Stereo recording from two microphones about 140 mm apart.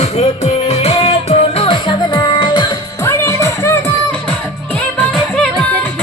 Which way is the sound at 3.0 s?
20° left (ahead or behind).